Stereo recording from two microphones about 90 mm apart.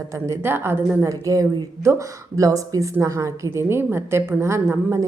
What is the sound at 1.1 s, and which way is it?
A woman's voice, 40° right (ahead or behind).